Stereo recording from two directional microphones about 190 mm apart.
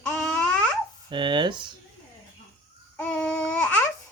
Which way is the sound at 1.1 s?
25° right (ahead or behind).